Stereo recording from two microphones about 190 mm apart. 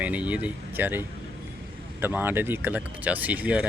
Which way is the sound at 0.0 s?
5° right (ahead or behind).